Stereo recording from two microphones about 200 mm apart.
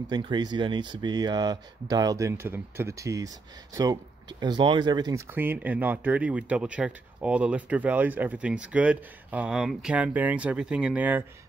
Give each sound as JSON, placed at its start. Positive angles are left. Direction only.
{"t": 0.1, "sound": "speech", "side_deg": -20}